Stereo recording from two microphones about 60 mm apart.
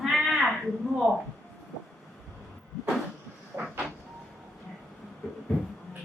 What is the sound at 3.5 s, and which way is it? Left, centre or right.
Vehicle, right.